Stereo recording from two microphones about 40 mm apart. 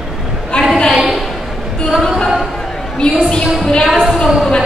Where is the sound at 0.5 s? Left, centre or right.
Left.